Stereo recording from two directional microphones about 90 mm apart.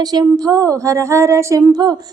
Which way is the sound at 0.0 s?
50° right (ahead or behind).